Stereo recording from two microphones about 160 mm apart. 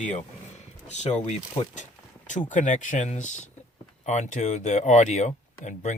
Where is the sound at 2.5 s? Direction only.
50° left (ahead or behind).